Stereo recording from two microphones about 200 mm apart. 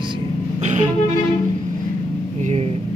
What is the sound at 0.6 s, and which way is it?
Music, 35° right (ahead or behind).